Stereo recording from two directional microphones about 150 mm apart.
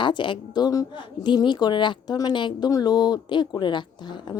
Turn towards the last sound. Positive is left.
turn(degrees=30)  # may be behind; listen again after turning